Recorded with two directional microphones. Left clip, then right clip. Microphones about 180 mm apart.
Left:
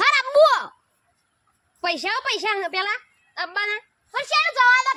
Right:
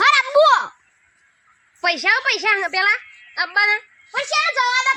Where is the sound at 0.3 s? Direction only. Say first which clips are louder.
Even; 35° left (ahead or behind).